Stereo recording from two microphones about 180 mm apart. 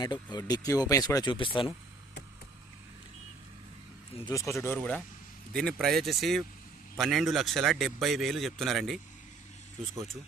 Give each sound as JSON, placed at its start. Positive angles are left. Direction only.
{"t": 0.0, "sound": "speech", "side_deg": 20}
{"t": 4.3, "sound": "speech", "side_deg": 15}